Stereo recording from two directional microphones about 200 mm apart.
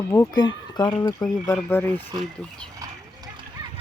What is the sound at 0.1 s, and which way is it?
Speech, 15° left (ahead or behind).